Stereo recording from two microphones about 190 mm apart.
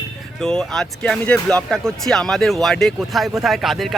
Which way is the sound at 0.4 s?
5° left (ahead or behind).